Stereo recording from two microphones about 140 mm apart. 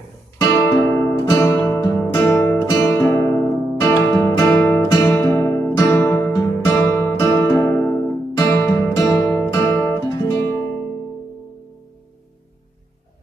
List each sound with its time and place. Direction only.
0.4 s music: 25° left (ahead or behind)
9.5 s guitar: 20° left (ahead or behind)
10.2 s music: 25° left (ahead or behind)